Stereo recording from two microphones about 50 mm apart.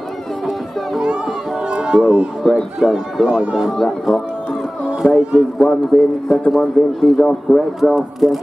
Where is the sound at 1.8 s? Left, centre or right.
Centre.